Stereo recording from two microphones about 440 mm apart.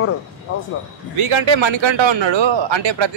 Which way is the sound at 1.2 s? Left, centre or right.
Right.